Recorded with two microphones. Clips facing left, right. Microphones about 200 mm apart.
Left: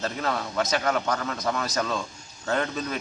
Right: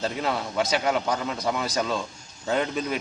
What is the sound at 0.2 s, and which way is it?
Speech, 5° right (ahead or behind).